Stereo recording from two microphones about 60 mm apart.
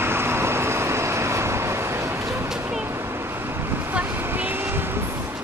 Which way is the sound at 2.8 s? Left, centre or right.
Right.